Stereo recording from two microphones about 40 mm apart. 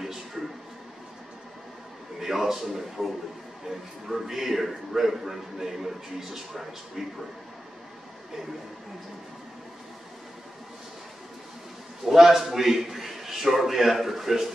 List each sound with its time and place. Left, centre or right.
0.4 s a sound: centre
2.1 s a man's voice: centre
4.1 s a man's voice: centre
12.0 s a man's voice: centre